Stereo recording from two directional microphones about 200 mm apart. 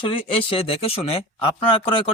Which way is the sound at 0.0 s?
25° left (ahead or behind).